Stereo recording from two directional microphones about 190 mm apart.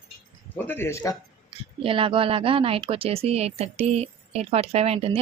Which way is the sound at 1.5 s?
30° right (ahead or behind).